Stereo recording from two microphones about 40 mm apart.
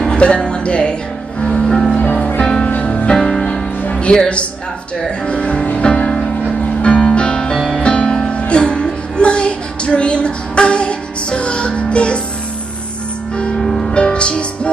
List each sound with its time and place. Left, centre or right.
0.0 s speech: left
1.4 s music: left
2.0 s music: left
2.9 s music: left
3.2 s music: centre
3.8 s music: left
4.1 s speech: left
5.2 s music: left
13.6 s music: centre
13.9 s music: left